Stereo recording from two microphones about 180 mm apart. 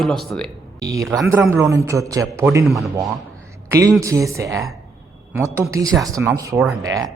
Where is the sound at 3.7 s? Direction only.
15° right (ahead or behind).